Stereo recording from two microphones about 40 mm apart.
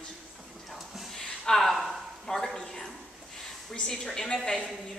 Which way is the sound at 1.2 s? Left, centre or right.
Centre.